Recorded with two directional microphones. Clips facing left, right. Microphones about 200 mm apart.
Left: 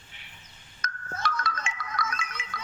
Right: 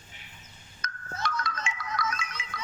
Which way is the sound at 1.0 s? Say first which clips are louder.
Left 1 dB; 50° left (ahead or behind).